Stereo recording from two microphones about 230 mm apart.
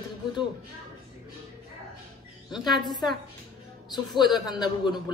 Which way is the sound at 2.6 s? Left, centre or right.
Centre.